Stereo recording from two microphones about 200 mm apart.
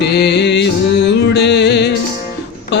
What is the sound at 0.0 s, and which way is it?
Music, 55° left (ahead or behind).